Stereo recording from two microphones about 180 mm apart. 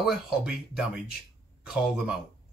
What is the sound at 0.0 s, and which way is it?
Speech, centre (ahead or behind).